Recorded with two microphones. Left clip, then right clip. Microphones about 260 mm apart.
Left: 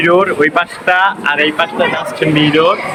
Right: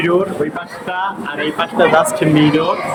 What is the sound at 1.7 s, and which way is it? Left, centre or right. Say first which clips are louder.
Speech: right 3 dB; centre.